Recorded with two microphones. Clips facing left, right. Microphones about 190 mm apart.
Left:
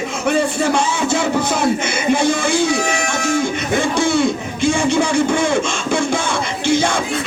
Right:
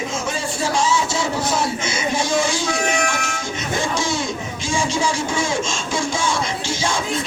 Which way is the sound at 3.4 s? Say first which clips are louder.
Left 6 dB; 60° left (ahead or behind).